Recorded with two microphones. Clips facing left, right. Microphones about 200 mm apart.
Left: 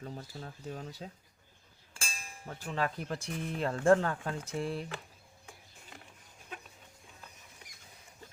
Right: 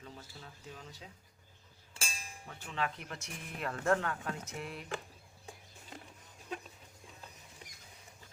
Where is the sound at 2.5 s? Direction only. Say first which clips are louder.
Left 4 dB; 40° left (ahead or behind).